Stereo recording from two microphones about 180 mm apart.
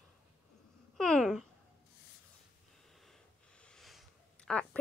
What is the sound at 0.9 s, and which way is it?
Babbling, 5° left (ahead or behind).